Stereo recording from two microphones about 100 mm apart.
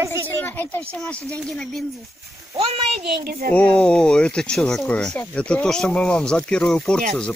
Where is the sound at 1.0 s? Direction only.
10° left (ahead or behind).